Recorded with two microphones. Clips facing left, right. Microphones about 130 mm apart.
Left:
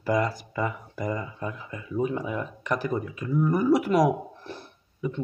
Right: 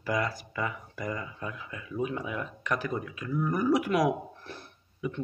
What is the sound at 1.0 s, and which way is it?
Speech, 25° left (ahead or behind).